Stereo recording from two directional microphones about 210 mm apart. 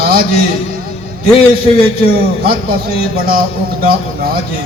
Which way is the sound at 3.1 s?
45° right (ahead or behind).